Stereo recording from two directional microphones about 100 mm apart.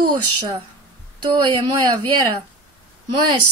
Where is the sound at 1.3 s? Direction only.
55° right (ahead or behind).